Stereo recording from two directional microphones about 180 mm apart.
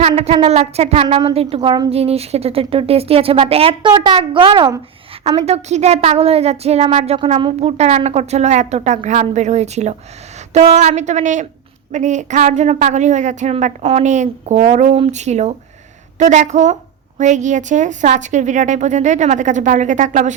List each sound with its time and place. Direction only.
0.1 s speech: 30° right (ahead or behind)
5.4 s a woman's voice: 40° right (ahead or behind)